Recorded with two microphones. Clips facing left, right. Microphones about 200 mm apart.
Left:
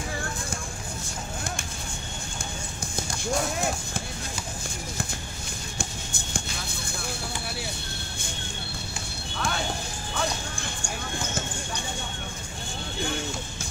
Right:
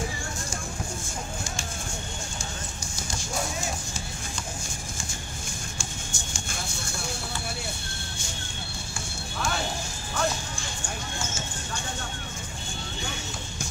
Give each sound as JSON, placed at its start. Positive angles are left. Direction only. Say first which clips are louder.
{"t": 5.8, "sound": "music", "louder": "left 2 dB", "side_deg": 60}